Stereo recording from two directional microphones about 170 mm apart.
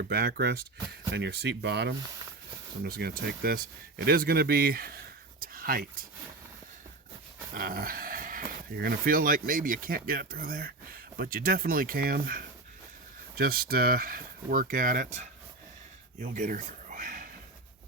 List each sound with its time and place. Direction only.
0.1 s speech: 70° right (ahead or behind)
2.8 s speech: 65° right (ahead or behind)
7.5 s speech: 55° right (ahead or behind)